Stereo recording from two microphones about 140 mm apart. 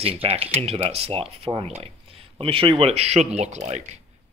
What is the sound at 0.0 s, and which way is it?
Speech, 45° right (ahead or behind).